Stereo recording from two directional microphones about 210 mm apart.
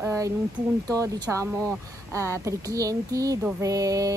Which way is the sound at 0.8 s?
15° right (ahead or behind).